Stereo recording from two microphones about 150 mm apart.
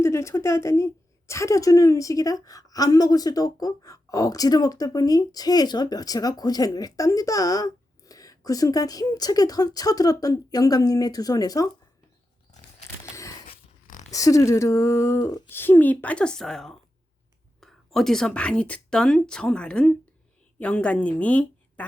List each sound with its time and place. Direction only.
0.0 s a woman's voice: 20° left (ahead or behind)
14.1 s a woman's voice: 20° left (ahead or behind)